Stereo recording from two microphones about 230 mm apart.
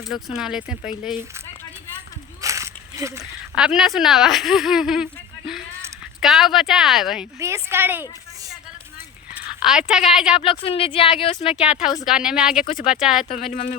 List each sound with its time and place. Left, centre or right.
0.1 s speech: centre
2.4 s a sound: centre
3.6 s speech: centre
7.3 s a woman's voice: centre
9.3 s speech: centre
10.4 s speech: left
11.5 s speech: centre
13.2 s speech: left